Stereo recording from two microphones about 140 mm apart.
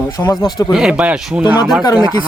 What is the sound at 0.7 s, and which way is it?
Speech, 5° right (ahead or behind).